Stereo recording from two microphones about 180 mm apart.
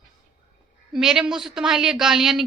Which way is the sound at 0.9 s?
5° right (ahead or behind).